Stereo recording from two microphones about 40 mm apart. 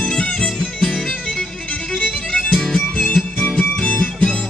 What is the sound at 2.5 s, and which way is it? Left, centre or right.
Music, centre.